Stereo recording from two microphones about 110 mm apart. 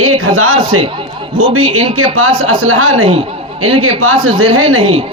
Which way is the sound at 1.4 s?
50° right (ahead or behind).